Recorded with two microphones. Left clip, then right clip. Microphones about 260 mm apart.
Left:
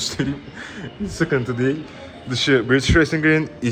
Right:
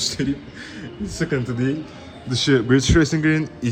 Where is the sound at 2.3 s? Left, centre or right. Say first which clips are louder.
Left 1 dB; centre.